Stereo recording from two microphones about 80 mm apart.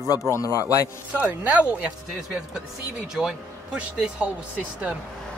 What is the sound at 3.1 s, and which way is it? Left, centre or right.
Speech, centre.